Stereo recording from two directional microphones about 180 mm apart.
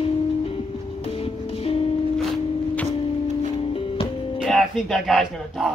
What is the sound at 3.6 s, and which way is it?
Music, 30° left (ahead or behind).